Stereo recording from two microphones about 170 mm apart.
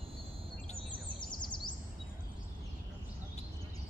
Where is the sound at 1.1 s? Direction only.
25° left (ahead or behind).